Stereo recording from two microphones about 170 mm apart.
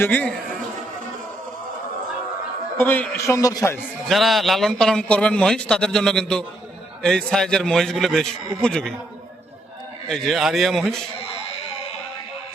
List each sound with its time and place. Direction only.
0.0 s a man's voice: 10° left (ahead or behind)
2.7 s a man's voice: 10° left (ahead or behind)
4.1 s a man's voice: centre (ahead or behind)
10.1 s a man's voice: centre (ahead or behind)